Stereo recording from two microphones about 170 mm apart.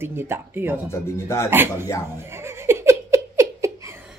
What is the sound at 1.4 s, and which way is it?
Speech, 15° right (ahead or behind).